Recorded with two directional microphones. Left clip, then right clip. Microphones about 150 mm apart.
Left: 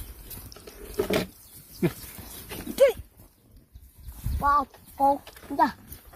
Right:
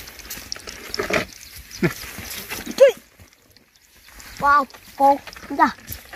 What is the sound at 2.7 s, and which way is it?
Horse, 50° left (ahead or behind).